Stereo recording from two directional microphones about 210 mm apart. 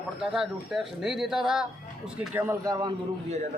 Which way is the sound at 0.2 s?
5° right (ahead or behind).